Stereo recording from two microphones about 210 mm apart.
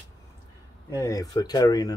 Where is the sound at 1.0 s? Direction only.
15° left (ahead or behind).